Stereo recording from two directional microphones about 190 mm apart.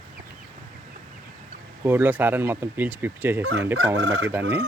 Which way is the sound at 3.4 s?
65° right (ahead or behind).